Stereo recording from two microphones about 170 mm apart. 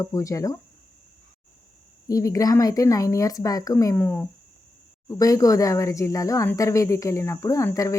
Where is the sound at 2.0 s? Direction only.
20° left (ahead or behind).